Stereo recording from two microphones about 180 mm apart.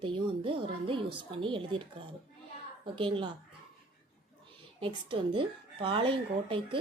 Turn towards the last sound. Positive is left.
turn(degrees=-30)  # may be behind; listen again after turning